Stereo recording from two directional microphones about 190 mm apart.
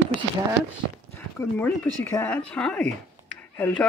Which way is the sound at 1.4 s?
10° left (ahead or behind).